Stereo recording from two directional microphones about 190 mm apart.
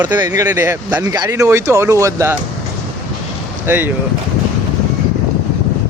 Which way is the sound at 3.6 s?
10° right (ahead or behind).